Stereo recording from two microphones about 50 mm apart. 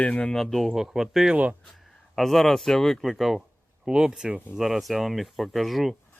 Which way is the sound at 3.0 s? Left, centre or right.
Centre.